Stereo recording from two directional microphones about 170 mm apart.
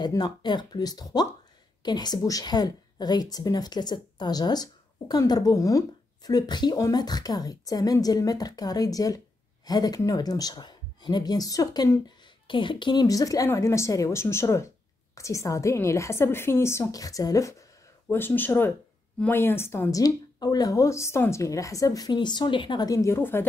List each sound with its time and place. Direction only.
0.0 s a woman's voice: 25° left (ahead or behind)